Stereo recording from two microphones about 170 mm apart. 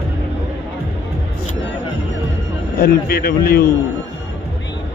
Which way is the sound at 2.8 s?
65° left (ahead or behind).